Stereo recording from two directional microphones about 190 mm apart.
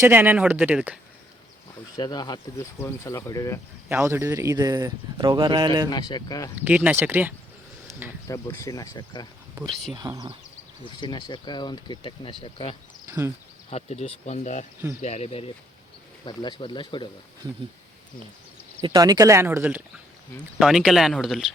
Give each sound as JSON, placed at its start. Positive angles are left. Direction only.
{"t": 0.0, "sound": "speech", "side_deg": -10}
{"t": 2.0, "sound": "speech", "side_deg": 20}
{"t": 3.8, "sound": "speech", "side_deg": -10}
{"t": 5.9, "sound": "speech", "side_deg": 20}
{"t": 6.6, "sound": "speech", "side_deg": -10}
{"t": 8.3, "sound": "speech", "side_deg": 15}
{"t": 9.9, "sound": "speech", "side_deg": -20}
{"t": 11.0, "sound": "speech", "side_deg": 25}
{"t": 18.8, "sound": "speech", "side_deg": -25}